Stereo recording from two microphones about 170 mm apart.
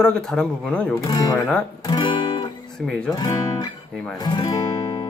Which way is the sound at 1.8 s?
25° left (ahead or behind).